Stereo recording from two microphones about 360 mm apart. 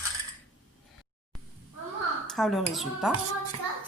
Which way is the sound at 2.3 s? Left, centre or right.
Centre.